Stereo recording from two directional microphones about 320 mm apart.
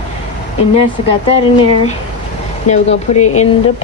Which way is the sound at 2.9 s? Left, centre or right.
Left.